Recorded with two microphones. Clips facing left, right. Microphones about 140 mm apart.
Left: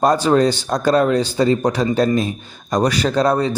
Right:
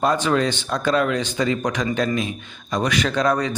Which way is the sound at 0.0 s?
35° left (ahead or behind).